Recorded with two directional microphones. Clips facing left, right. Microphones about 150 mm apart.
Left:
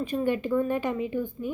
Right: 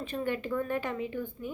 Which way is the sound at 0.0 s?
15° left (ahead or behind).